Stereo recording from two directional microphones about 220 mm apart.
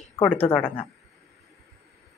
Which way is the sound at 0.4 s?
5° left (ahead or behind).